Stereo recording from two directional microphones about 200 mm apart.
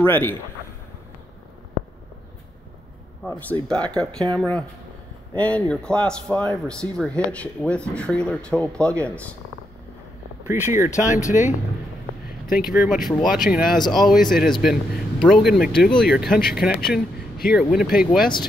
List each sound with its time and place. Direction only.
0.0 s a man's voice: 10° left (ahead or behind)
3.3 s a man's voice: 10° left (ahead or behind)
10.4 s speech: 10° right (ahead or behind)
11.2 s speech: 40° left (ahead or behind)
12.7 s speech: centre (ahead or behind)